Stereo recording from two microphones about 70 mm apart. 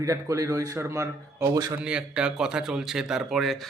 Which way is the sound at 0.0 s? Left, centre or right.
Right.